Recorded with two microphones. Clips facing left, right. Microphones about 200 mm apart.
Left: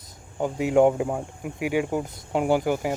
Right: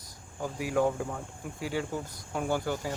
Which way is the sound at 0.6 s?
25° left (ahead or behind).